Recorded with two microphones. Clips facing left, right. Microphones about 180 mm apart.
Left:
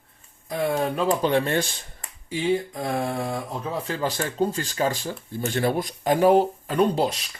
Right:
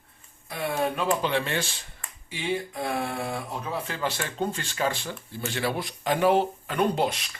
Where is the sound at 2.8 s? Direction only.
35° left (ahead or behind).